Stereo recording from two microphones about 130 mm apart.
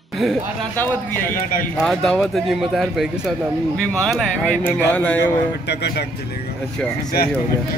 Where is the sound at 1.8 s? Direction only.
5° left (ahead or behind).